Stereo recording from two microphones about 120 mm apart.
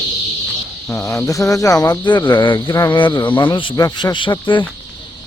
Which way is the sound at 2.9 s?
40° left (ahead or behind).